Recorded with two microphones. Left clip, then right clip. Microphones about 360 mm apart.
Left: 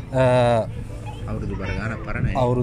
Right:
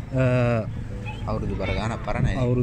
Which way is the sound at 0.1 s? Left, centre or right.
Centre.